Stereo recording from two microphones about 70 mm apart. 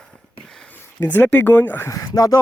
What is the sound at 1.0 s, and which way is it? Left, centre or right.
Speech, left.